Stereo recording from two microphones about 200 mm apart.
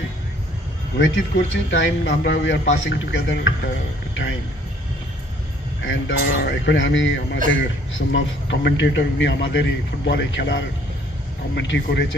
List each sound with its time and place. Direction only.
0.9 s a man's voice: 65° left (ahead or behind)
5.9 s a man's voice: 60° left (ahead or behind)